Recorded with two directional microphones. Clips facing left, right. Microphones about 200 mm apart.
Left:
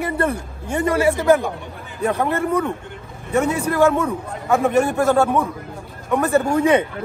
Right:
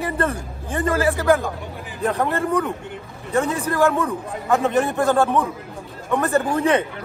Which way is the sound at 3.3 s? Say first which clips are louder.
Left 2 dB; 15° left (ahead or behind).